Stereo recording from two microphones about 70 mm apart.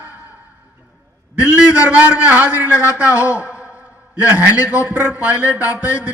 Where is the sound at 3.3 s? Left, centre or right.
Right.